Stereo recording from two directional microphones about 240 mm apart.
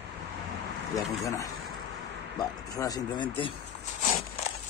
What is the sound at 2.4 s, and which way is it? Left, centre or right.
Speech, centre.